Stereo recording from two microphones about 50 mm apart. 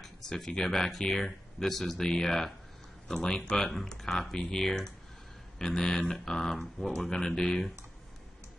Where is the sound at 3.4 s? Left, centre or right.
Left.